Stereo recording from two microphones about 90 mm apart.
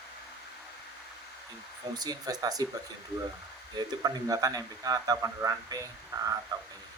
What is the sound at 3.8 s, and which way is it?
Speech, 45° right (ahead or behind).